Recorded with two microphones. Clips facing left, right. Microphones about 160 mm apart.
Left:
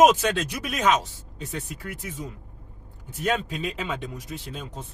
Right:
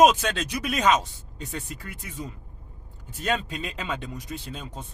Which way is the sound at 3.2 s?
5° left (ahead or behind).